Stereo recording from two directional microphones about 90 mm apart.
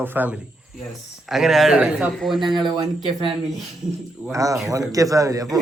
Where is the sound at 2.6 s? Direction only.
55° right (ahead or behind).